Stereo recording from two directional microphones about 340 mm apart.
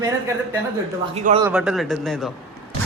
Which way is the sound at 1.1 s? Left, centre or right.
Centre.